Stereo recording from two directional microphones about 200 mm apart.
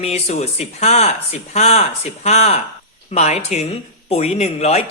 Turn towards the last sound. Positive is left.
turn(degrees=35)  # may be behind; listen again after turning